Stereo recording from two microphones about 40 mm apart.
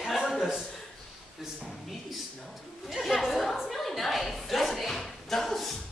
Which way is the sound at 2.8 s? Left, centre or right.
Centre.